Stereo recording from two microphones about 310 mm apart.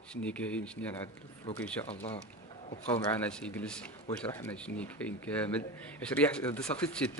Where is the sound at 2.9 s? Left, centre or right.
Centre.